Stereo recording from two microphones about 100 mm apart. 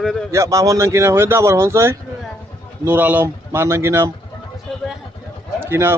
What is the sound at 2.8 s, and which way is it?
Speech, 15° right (ahead or behind).